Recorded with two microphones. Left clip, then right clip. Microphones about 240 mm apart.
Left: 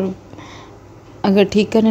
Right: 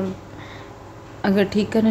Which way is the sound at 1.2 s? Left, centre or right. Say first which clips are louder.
Left 6 dB; left.